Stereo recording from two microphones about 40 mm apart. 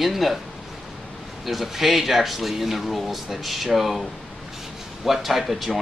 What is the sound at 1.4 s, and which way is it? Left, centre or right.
Speech, centre.